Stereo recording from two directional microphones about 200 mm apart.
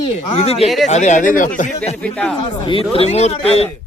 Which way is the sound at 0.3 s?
30° left (ahead or behind).